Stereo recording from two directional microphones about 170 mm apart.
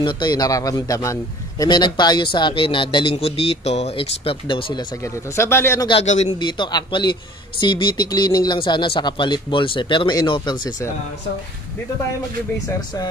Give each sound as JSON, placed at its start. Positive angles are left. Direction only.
{"t": 0.0, "sound": "a man's voice", "side_deg": 25}
{"t": 5.0, "sound": "speech", "side_deg": 15}
{"t": 5.9, "sound": "a man's voice", "side_deg": 40}
{"t": 6.4, "sound": "a man's voice", "side_deg": 25}